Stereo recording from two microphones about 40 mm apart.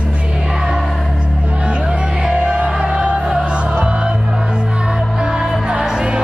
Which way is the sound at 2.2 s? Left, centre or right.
Right.